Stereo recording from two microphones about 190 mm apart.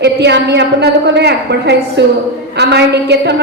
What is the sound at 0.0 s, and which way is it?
A woman's voice, 60° right (ahead or behind).